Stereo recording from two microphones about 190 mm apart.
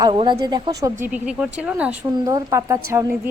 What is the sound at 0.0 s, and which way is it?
Speech, 25° right (ahead or behind).